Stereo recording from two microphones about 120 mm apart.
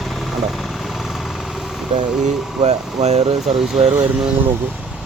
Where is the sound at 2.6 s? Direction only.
65° right (ahead or behind).